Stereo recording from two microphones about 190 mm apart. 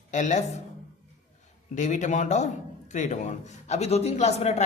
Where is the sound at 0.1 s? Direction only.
40° left (ahead or behind).